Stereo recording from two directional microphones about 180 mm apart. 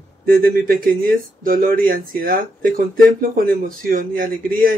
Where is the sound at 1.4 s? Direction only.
50° right (ahead or behind).